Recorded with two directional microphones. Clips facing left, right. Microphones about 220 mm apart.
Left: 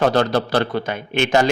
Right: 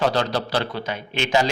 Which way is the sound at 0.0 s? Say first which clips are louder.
Left 5 dB; 50° left (ahead or behind).